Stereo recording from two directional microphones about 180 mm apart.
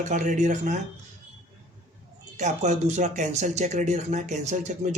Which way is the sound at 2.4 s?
40° right (ahead or behind).